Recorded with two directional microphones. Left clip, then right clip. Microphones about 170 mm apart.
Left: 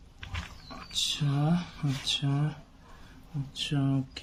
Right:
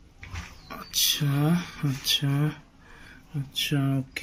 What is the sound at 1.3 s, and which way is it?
Speech, 15° right (ahead or behind).